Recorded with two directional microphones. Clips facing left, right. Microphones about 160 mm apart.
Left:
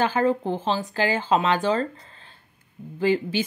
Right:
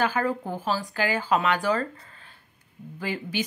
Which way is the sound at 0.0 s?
25° left (ahead or behind).